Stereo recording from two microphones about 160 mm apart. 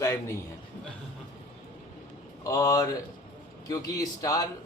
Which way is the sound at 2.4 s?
20° left (ahead or behind).